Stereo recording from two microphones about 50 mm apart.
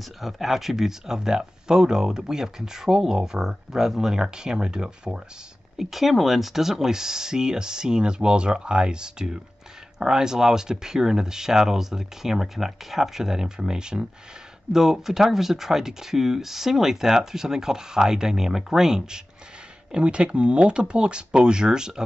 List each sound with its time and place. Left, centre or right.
0.2 s speech: centre
5.8 s speech: centre